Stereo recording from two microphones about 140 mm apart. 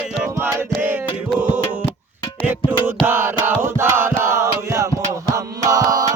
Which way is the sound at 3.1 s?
15° right (ahead or behind).